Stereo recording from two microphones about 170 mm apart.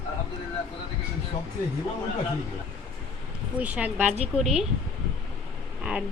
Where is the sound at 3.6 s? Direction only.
10° right (ahead or behind).